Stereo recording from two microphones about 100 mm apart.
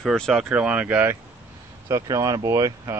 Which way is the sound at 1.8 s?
35° right (ahead or behind).